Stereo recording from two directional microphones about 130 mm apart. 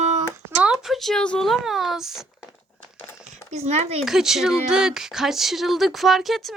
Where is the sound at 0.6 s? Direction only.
5° right (ahead or behind).